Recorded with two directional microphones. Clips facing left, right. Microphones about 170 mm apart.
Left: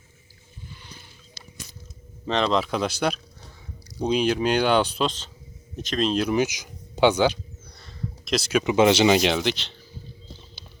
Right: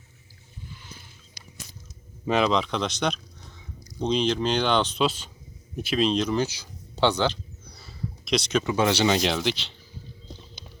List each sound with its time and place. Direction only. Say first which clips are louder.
2.2 s speech: right 1 dB; 5° right (ahead or behind)
2.6 s speech: left 2 dB; 5° left (ahead or behind)
4.9 s speech: right 1 dB; 10° right (ahead or behind); by 7.3 s 10° left (ahead or behind)
7.8 s a sound: left 1 dB; centre (ahead or behind)
8.6 s speech: left 8 dB; 20° left (ahead or behind)
9.2 s speech: left 3 dB; centre (ahead or behind)